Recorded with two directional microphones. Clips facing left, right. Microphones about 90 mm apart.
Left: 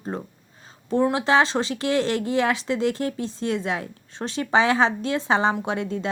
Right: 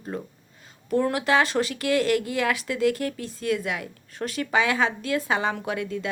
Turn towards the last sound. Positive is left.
turn(degrees=30)  # may be behind; listen again after turning